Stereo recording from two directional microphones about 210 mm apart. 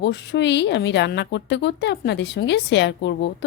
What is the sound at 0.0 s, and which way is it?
A woman's voice, 55° left (ahead or behind).